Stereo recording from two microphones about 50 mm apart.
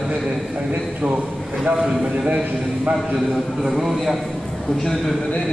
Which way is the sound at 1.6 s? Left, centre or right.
Centre.